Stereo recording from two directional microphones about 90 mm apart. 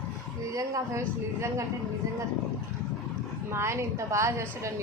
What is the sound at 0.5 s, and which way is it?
A woman's voice, 35° right (ahead or behind).